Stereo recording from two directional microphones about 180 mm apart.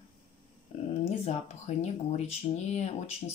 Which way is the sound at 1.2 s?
35° left (ahead or behind).